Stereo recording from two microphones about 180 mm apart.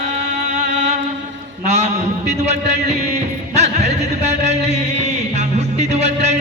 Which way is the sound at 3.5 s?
40° right (ahead or behind).